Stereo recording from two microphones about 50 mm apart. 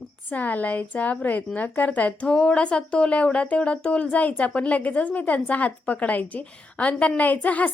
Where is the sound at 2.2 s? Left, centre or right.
Centre.